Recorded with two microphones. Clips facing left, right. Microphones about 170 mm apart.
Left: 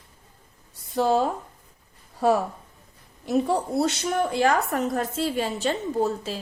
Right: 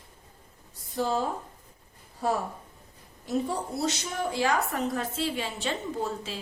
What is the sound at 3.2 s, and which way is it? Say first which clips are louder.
A woman's voice: left 6 dB; 70° left (ahead or behind).